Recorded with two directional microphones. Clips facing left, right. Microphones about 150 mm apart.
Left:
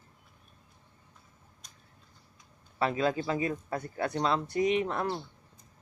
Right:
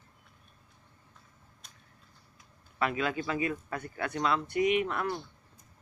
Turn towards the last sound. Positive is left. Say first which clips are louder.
# even
turn(degrees=30)  # may be behind; listen again after turning